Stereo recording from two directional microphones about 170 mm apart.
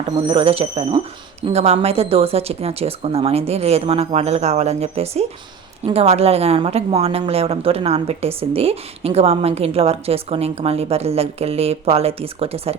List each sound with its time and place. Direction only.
0.3 s a woman's voice: 35° right (ahead or behind)